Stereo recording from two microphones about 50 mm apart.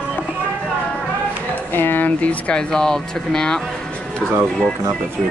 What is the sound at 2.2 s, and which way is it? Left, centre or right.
Speech, left.